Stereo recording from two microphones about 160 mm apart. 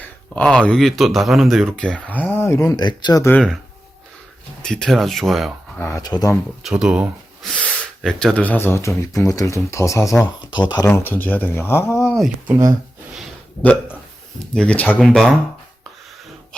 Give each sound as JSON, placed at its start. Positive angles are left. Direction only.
{"t": 0.0, "sound": "speech", "side_deg": 5}
{"t": 3.2, "sound": "speech", "side_deg": 5}
{"t": 4.6, "sound": "speech", "side_deg": 5}
{"t": 5.8, "sound": "speech", "side_deg": 20}
{"t": 6.6, "sound": "speech", "side_deg": -5}
{"t": 7.5, "sound": "speech", "side_deg": 5}
{"t": 10.8, "sound": "speech", "side_deg": 10}
{"t": 12.1, "sound": "speech", "side_deg": 0}
{"t": 13.6, "sound": "speech", "side_deg": 10}